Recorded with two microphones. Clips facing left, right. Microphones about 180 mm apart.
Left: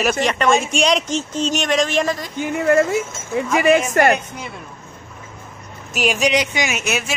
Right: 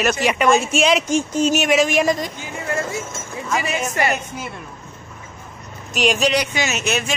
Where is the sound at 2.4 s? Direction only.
65° left (ahead or behind).